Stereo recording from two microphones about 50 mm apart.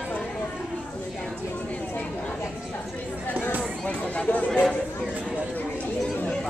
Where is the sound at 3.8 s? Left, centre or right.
Left.